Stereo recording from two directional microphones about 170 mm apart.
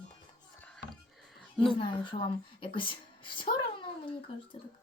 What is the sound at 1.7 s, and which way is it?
A woman's voice, 30° left (ahead or behind).